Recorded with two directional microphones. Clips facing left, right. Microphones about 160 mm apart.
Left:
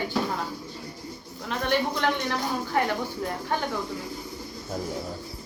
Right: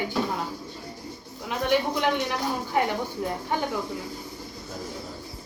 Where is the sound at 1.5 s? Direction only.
15° right (ahead or behind).